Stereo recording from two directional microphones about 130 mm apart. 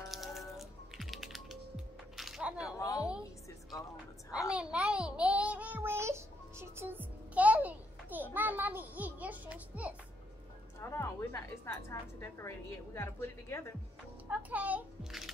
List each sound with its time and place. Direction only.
0.1 s music: centre (ahead or behind)
2.1 s a sound: centre (ahead or behind)
2.6 s a sound: 25° left (ahead or behind)
4.5 s child singing: 10° right (ahead or behind)
10.8 s a woman's voice: 20° left (ahead or behind)
14.3 s a child's voice: 10° right (ahead or behind)